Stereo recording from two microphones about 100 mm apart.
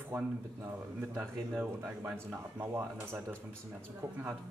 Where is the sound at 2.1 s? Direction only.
20° right (ahead or behind).